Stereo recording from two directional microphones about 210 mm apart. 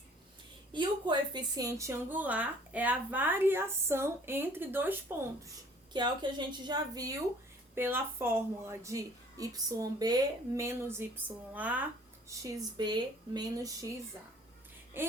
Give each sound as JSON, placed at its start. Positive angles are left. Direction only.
{"t": 0.7, "sound": "a woman's voice", "side_deg": -20}
{"t": 5.9, "sound": "a woman's voice", "side_deg": -20}
{"t": 15.0, "sound": "a woman's voice", "side_deg": -10}